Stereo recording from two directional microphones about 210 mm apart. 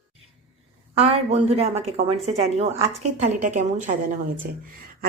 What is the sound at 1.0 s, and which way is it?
A woman's voice, 30° right (ahead or behind).